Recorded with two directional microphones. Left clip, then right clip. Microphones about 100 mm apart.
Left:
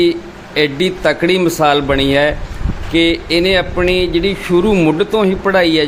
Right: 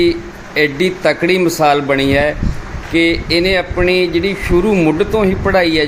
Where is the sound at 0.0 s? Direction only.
10° left (ahead or behind).